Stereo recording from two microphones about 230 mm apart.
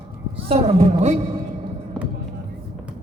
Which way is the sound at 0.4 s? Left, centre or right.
Right.